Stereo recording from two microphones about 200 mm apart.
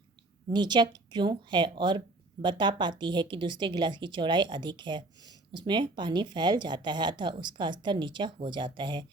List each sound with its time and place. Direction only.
0.5 s speech: 20° right (ahead or behind)